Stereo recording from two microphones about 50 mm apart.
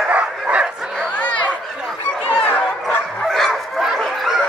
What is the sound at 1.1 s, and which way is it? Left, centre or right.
Chatter, left.